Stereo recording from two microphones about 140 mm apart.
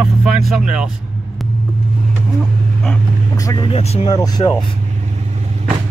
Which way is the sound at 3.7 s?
45° left (ahead or behind).